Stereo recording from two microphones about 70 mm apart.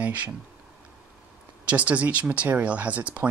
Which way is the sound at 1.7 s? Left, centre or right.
Centre.